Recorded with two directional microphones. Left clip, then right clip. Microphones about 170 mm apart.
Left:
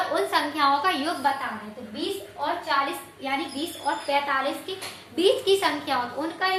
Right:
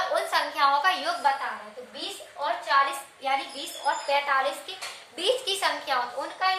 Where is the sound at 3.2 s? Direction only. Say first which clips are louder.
Even; 25° right (ahead or behind).